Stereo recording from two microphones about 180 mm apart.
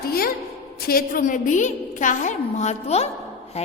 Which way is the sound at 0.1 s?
55° left (ahead or behind).